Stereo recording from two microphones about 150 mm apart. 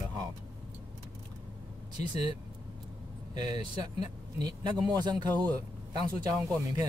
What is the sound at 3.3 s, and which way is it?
Speech, 30° right (ahead or behind).